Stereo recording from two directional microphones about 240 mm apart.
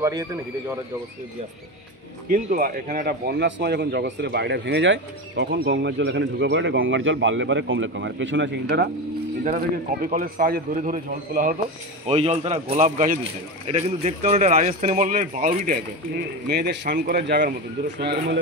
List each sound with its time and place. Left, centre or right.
0.0 s speech: centre
2.2 s speech: right
9.4 s speech: right